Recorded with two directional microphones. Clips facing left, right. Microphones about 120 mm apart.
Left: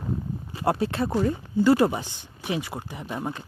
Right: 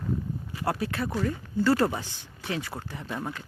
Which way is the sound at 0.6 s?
25° left (ahead or behind).